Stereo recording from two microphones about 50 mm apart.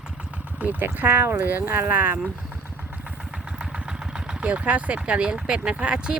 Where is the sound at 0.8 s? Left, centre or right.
Right.